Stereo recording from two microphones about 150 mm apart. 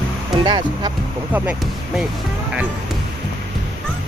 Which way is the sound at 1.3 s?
10° right (ahead or behind).